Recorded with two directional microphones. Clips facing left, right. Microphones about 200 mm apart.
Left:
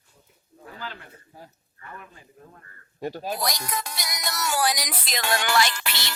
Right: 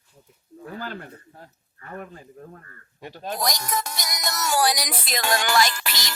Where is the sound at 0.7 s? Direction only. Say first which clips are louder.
Right 5 dB; 45° right (ahead or behind).